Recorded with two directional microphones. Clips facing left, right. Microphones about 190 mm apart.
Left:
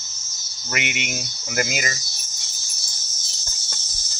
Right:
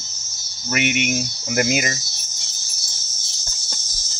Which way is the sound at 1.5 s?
25° right (ahead or behind).